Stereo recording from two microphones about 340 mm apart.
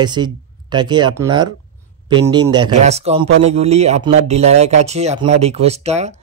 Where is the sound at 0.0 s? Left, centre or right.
Centre.